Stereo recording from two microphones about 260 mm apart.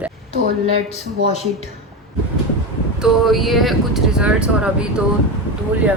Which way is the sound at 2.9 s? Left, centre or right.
Centre.